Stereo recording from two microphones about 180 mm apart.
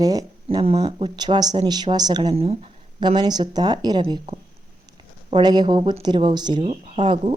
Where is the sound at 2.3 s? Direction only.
35° right (ahead or behind).